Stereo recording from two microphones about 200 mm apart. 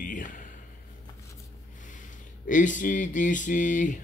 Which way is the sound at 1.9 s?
40° left (ahead or behind).